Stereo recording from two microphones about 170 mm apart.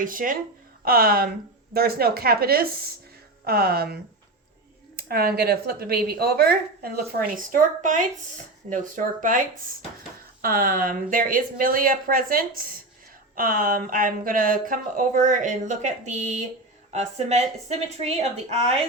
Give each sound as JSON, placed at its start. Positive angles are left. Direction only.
{"t": 0.0, "sound": "speech", "side_deg": -55}
{"t": 4.9, "sound": "speech", "side_deg": -65}